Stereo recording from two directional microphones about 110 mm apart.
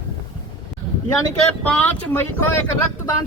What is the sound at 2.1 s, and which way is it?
Speech, 20° left (ahead or behind).